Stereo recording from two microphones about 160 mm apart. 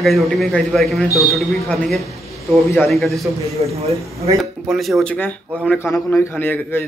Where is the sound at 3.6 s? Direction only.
35° right (ahead or behind).